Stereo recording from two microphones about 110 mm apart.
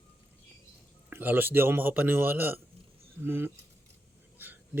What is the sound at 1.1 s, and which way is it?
A man's voice, 15° right (ahead or behind).